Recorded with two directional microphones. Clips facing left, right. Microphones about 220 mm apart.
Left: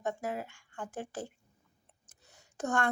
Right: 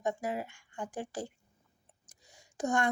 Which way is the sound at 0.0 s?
15° right (ahead or behind).